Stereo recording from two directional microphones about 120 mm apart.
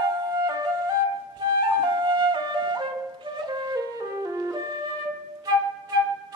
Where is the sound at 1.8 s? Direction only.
40° right (ahead or behind).